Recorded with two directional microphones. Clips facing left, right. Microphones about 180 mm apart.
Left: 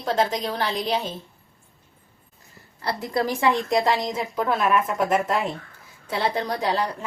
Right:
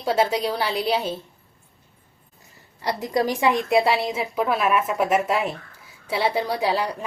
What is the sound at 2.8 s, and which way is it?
A woman's voice, 15° right (ahead or behind).